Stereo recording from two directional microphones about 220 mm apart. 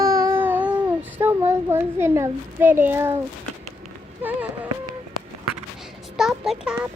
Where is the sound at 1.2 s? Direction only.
10° right (ahead or behind).